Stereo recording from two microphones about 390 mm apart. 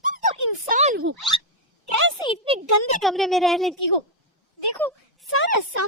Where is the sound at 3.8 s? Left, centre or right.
Left.